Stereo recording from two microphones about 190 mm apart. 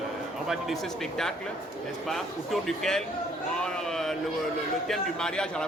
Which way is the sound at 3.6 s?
Centre (ahead or behind).